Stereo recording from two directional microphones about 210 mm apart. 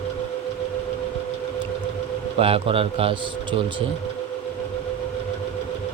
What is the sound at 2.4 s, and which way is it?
Speech, 25° right (ahead or behind).